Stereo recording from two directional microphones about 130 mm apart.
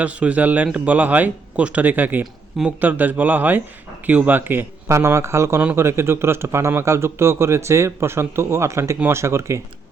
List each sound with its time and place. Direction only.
0.0 s a man's voice: 10° right (ahead or behind)